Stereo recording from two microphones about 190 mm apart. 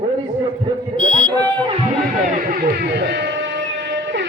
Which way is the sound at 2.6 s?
55° right (ahead or behind).